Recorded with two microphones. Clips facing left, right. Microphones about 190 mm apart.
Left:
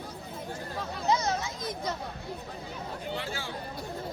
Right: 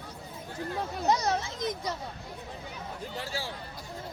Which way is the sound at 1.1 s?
35° right (ahead or behind).